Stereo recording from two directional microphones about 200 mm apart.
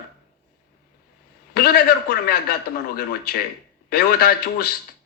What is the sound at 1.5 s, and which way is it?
Speech, 50° left (ahead or behind).